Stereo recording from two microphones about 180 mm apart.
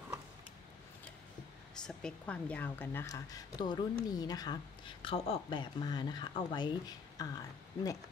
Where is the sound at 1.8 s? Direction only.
5° left (ahead or behind).